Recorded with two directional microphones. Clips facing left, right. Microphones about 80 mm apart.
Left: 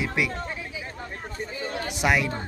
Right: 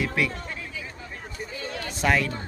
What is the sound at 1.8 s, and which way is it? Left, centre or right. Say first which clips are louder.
Speech: even; centre.